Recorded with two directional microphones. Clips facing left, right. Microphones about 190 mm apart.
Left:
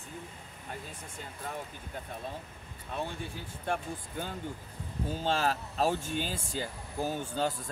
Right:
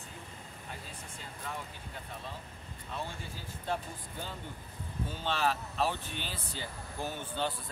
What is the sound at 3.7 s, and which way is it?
Speech, 50° left (ahead or behind).